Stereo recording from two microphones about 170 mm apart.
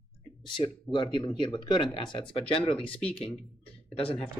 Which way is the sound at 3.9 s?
35° left (ahead or behind).